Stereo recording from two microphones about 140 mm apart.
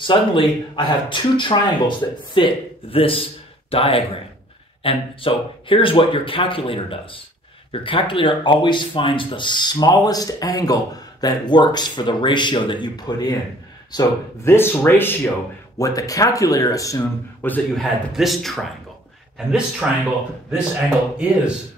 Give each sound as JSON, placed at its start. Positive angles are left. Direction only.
{"t": 0.0, "sound": "speech", "side_deg": 35}
{"t": 13.9, "sound": "speech", "side_deg": 20}
{"t": 17.7, "sound": "speech", "side_deg": 0}